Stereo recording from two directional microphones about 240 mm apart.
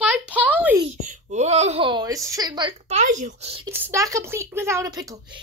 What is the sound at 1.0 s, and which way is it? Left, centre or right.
Speech, right.